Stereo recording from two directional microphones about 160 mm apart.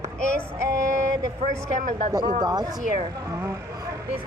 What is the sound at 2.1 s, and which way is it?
Speech, 25° right (ahead or behind).